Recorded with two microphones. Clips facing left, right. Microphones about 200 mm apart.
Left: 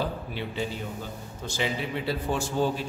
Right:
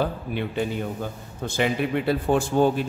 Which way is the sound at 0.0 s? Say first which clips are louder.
Right 5 dB; 55° right (ahead or behind).